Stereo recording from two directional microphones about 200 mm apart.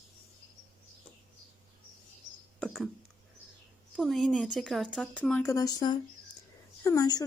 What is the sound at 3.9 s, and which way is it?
Speech, centre (ahead or behind).